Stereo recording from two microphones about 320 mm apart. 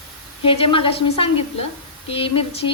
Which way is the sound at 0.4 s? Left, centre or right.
Centre.